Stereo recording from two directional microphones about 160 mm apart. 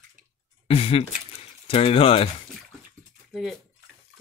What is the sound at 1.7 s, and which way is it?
Speech, 35° left (ahead or behind).